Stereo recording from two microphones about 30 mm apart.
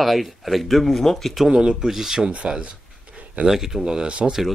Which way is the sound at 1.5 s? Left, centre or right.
Right.